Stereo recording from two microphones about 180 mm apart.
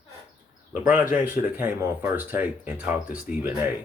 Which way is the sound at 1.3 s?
10° right (ahead or behind).